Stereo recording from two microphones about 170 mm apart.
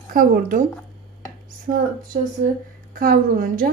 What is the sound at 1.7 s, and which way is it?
Speech, 45° right (ahead or behind).